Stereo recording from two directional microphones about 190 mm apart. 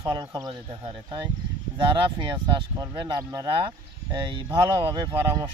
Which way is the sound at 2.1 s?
25° right (ahead or behind).